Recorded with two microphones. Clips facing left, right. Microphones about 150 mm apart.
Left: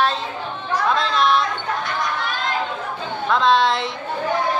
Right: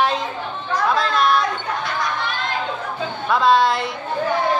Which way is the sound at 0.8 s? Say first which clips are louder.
Right 1 dB; centre (ahead or behind).